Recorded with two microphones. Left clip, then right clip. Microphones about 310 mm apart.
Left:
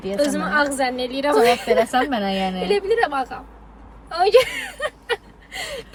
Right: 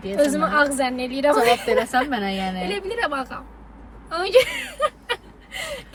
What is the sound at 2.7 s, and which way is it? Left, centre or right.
Speech, centre.